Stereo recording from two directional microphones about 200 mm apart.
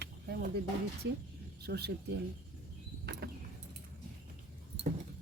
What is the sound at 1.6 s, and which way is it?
Speech, 55° right (ahead or behind).